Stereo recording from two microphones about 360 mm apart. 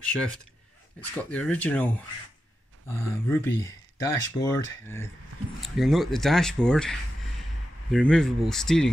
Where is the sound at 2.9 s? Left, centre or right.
Centre.